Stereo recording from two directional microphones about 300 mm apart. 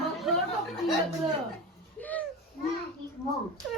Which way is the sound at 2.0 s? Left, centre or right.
Centre.